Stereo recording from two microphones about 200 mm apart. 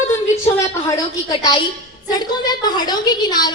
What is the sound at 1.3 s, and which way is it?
A woman's voice, 20° left (ahead or behind).